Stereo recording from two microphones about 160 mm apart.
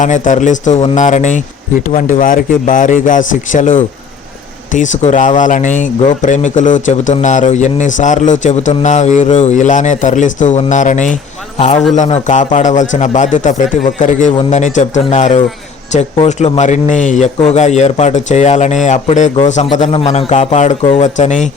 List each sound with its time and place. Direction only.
0.0 s speech: 50° left (ahead or behind)